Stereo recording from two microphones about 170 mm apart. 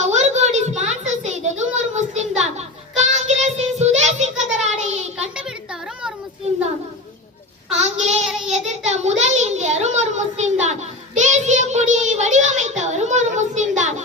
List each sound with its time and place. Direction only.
0.0 s a sound: 40° right (ahead or behind)
3.2 s child singing: 40° right (ahead or behind)
7.7 s child singing: 40° right (ahead or behind)